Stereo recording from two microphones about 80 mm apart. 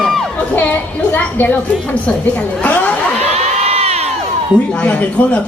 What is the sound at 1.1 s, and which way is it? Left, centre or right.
A man's voice, centre.